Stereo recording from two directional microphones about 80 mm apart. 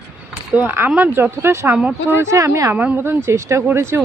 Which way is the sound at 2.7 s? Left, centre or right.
Centre.